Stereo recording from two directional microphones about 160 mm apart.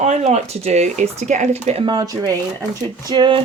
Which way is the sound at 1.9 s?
25° right (ahead or behind).